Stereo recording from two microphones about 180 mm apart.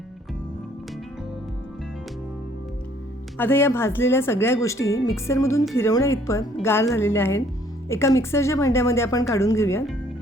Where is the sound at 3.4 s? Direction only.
10° left (ahead or behind).